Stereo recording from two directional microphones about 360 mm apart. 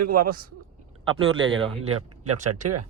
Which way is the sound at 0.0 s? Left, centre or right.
Right.